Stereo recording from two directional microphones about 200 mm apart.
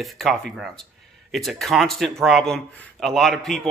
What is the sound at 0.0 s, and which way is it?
Speech, centre (ahead or behind).